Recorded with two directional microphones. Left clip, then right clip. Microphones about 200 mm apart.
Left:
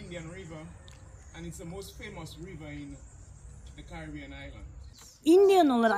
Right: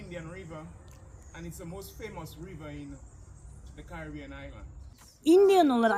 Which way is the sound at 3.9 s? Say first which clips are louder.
Right 1 dB; 5° right (ahead or behind).